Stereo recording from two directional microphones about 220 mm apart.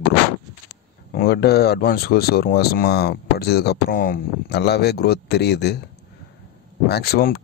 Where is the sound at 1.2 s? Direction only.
45° left (ahead or behind).